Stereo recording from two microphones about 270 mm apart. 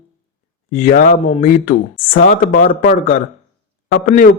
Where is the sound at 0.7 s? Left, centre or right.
Left.